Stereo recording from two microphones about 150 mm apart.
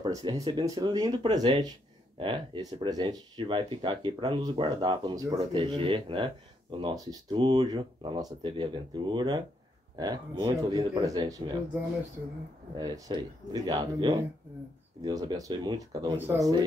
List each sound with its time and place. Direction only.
0.0 s speech: 30° right (ahead or behind)
5.4 s speech: 35° right (ahead or behind)
12.7 s speech: 25° right (ahead or behind)